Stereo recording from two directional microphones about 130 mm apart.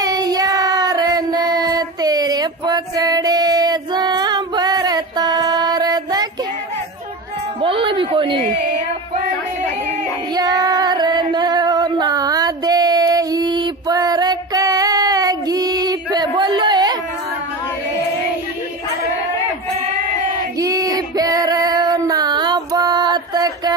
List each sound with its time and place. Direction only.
0.0 s child singing: 30° right (ahead or behind)
7.6 s a sound: 40° right (ahead or behind)
10.3 s female singing: 30° right (ahead or behind)
20.6 s female singing: 25° right (ahead or behind)